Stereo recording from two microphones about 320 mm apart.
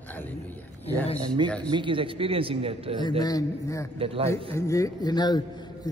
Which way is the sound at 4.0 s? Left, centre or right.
Centre.